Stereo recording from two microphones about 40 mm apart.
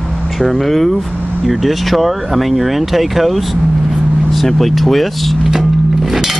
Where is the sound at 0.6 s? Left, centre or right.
Centre.